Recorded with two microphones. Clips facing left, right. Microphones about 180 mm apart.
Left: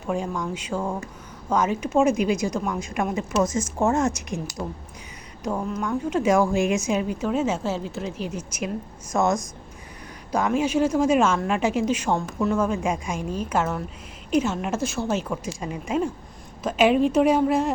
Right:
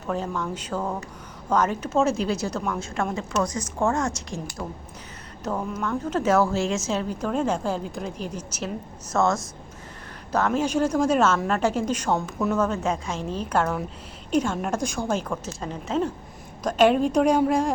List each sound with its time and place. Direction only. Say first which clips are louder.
0.1 s a woman's voice: left 1 dB; 10° left (ahead or behind)
5.4 s a woman's voice: left 1 dB; 10° left (ahead or behind)